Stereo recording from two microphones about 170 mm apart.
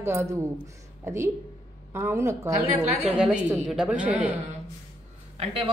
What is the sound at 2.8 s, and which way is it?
Speech, 40° right (ahead or behind).